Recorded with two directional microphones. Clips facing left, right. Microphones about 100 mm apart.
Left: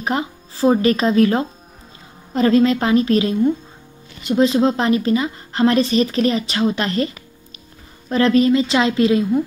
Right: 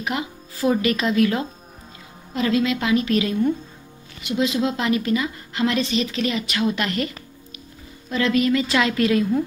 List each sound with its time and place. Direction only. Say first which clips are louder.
0.0 s a woman's voice: left 5 dB; 35° left (ahead or behind)